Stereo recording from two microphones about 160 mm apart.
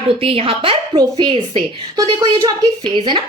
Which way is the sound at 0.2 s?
35° right (ahead or behind).